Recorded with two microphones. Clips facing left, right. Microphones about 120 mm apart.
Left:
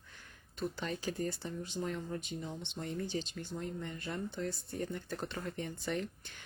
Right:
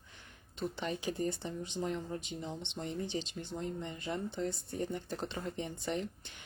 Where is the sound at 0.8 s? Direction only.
20° right (ahead or behind).